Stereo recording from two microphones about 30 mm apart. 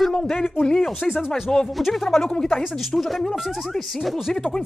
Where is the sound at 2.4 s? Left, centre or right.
Left.